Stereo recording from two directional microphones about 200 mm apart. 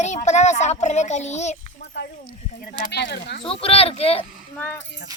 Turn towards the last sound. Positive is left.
turn(degrees=10)  # may be behind; listen again after turning